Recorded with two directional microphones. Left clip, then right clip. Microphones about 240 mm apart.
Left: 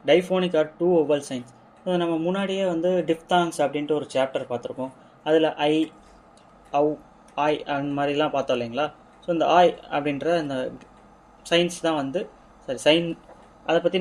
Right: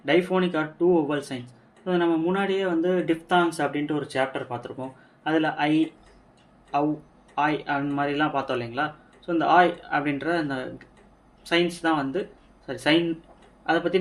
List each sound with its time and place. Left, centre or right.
0.0 s speech: left